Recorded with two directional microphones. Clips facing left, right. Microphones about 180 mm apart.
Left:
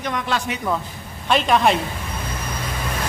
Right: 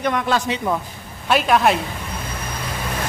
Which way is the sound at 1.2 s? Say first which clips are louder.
Right 1 dB; 5° right (ahead or behind).